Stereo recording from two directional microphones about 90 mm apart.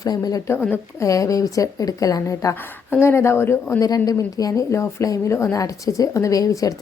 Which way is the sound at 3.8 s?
45° left (ahead or behind).